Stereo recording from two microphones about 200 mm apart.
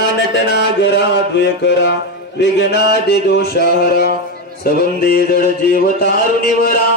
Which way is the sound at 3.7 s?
50° left (ahead or behind).